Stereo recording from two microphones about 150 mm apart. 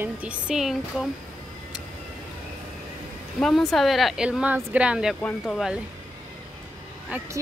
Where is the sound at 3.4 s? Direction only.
Centre (ahead or behind).